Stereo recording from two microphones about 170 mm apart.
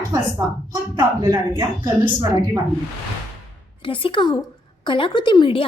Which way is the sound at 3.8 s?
30° left (ahead or behind).